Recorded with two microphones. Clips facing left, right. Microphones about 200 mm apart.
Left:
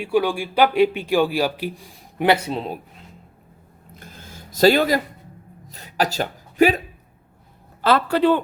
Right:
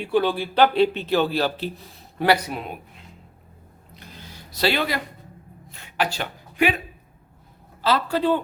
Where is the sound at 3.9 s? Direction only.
45° left (ahead or behind).